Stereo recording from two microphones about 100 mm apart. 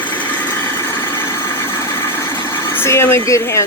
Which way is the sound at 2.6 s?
25° left (ahead or behind).